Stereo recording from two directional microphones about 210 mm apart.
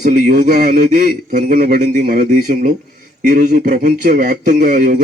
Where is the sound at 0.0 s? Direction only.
35° right (ahead or behind).